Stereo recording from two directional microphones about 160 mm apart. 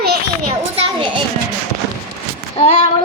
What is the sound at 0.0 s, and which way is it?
Children playing, 85° right.